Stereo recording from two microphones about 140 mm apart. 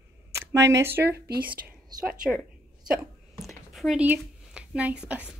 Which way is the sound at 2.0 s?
10° right (ahead or behind).